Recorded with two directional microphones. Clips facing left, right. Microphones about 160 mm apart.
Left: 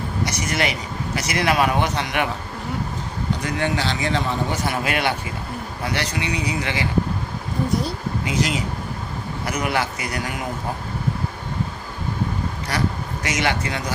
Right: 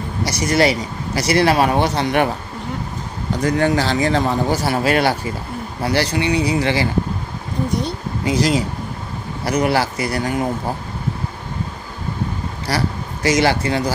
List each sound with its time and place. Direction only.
0.2 s speech: 35° right (ahead or behind)
3.4 s speech: 40° right (ahead or behind)
8.3 s speech: 35° right (ahead or behind)
12.6 s speech: 35° right (ahead or behind)